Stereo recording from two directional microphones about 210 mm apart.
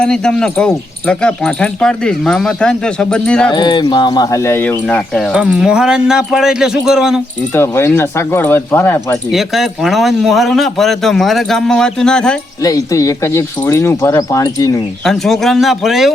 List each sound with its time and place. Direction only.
0.0 s speech: 5° left (ahead or behind)
3.5 s speech: 20° left (ahead or behind)
5.3 s speech: 5° right (ahead or behind)
7.5 s speech: 10° left (ahead or behind)
9.3 s speech: centre (ahead or behind)
12.6 s speech: 15° left (ahead or behind)
15.0 s speech: centre (ahead or behind)